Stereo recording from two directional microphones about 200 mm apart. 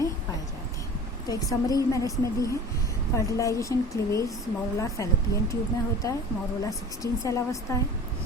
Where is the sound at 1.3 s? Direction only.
20° left (ahead or behind).